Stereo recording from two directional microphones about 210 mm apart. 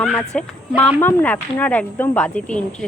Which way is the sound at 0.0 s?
5° left (ahead or behind).